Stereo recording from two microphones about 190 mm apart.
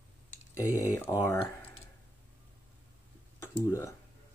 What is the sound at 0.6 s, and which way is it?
Speech, 15° left (ahead or behind).